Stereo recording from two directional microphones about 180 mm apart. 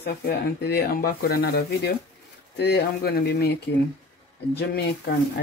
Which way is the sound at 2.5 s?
65° left (ahead or behind).